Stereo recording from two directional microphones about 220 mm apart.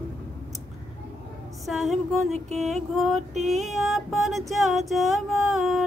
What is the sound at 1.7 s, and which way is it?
Music, centre (ahead or behind).